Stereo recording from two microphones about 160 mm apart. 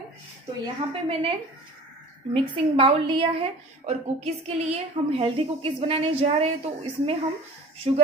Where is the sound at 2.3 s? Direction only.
35° right (ahead or behind).